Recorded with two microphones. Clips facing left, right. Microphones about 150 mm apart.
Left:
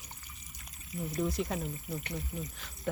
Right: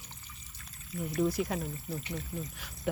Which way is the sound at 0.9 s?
20° left (ahead or behind).